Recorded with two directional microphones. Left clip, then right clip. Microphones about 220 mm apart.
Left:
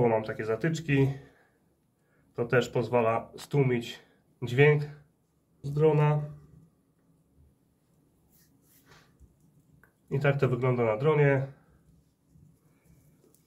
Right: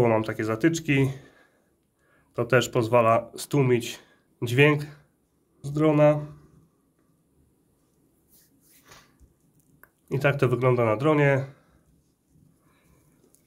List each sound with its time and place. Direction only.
0.0 s speech: 55° right (ahead or behind)
2.3 s speech: 55° right (ahead or behind)
9.8 s speech: 50° right (ahead or behind)